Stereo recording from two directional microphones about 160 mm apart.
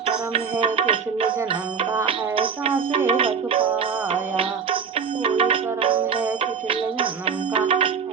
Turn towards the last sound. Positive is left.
turn(degrees=-35)  # may be behind; listen again after turning